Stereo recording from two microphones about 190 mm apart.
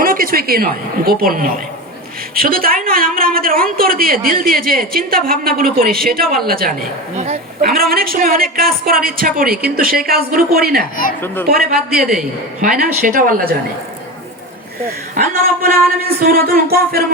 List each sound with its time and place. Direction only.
0.0 s a woman's voice: 45° right (ahead or behind)
11.9 s a man's voice: 5° right (ahead or behind)
13.0 s a woman's voice: 45° right (ahead or behind)
15.1 s a woman's voice: 50° right (ahead or behind)